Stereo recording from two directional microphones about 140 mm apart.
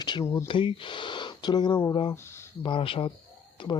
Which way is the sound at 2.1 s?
20° left (ahead or behind).